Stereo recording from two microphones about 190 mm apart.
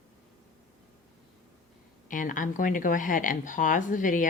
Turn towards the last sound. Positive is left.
turn(degrees=45)  # may be behind; listen again after turning